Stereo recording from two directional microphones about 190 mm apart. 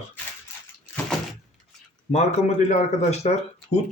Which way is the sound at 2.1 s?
35° left (ahead or behind).